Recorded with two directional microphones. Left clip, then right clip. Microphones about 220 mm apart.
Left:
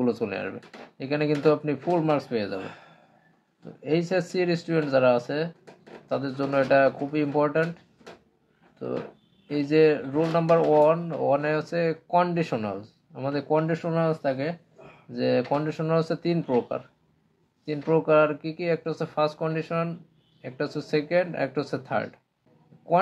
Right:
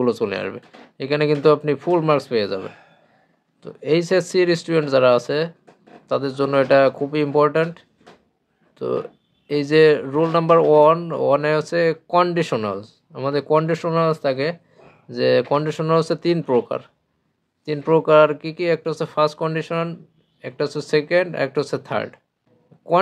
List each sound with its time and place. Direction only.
0.0 s speech: 35° right (ahead or behind)
3.8 s speech: 40° right (ahead or behind)
9.5 s speech: 40° right (ahead or behind)